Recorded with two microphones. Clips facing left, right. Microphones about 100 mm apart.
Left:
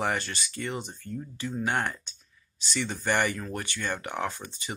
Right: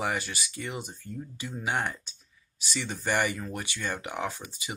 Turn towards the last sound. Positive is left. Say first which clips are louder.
# left 1 dB
turn(degrees=-10)  # may be behind; listen again after turning